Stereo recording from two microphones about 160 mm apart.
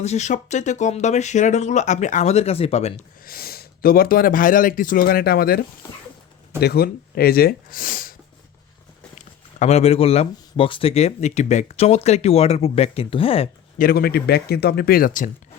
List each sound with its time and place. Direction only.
0.0 s speech: 45° left (ahead or behind)
3.2 s speech: 70° left (ahead or behind)
6.6 s speech: 80° left; by 8.1 s 60° left (ahead or behind)
9.6 s speech: 40° left (ahead or behind)
13.7 s speech: 70° left (ahead or behind)